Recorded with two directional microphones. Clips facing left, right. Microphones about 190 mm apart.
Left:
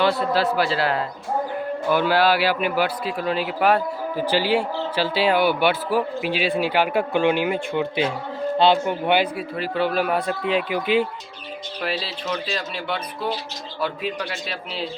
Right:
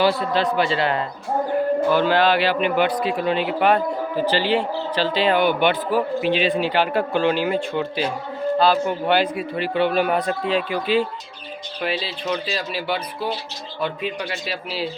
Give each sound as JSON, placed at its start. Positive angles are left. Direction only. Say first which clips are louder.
{"t": 0.0, "sound": "speech", "louder": "right 1 dB", "side_deg": 0}
{"t": 9.3, "sound": "speech", "louder": "right 3 dB", "side_deg": 0}
{"t": 10.5, "sound": "speech", "louder": "even", "side_deg": 15}
{"t": 11.8, "sound": "speech", "louder": "right 2 dB", "side_deg": 0}